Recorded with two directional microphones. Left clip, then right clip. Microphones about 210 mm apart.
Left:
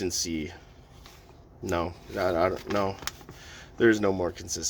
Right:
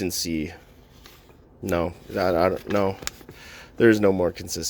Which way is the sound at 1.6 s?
20° right (ahead or behind).